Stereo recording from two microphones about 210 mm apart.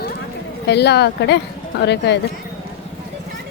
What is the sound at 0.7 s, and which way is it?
Speech, 50° left (ahead or behind).